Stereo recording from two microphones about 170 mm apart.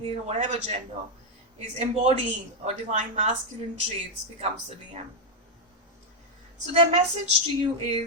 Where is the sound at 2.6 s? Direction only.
40° right (ahead or behind).